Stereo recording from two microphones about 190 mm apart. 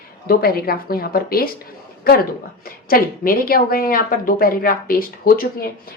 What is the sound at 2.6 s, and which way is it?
A woman's voice, 50° left (ahead or behind).